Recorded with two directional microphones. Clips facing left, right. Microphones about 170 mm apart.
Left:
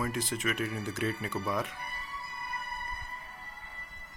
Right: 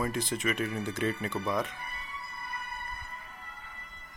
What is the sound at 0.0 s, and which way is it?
Speech, 5° left (ahead or behind).